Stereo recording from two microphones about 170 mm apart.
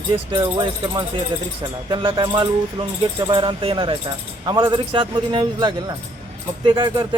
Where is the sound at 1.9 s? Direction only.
30° right (ahead or behind).